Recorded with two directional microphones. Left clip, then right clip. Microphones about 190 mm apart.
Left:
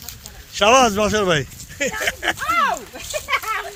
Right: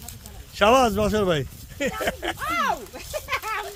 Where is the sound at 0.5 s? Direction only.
Centre (ahead or behind).